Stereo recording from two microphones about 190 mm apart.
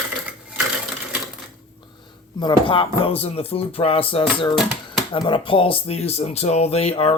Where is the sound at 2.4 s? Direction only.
25° left (ahead or behind).